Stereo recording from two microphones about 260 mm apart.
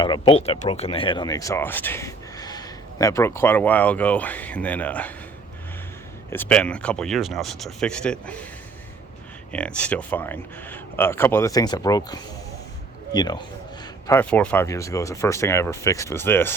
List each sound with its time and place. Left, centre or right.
0.0 s speech: centre
6.3 s speech: centre
9.5 s speech: centre